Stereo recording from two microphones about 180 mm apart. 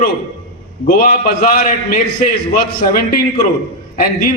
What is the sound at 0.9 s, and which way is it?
A man's voice, 50° left (ahead or behind).